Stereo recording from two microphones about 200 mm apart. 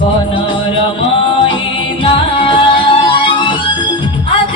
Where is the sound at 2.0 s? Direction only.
25° left (ahead or behind).